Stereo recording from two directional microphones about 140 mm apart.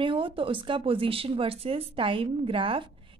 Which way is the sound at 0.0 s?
40° right (ahead or behind).